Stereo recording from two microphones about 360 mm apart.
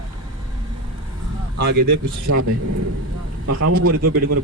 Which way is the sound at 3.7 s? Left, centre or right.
Right.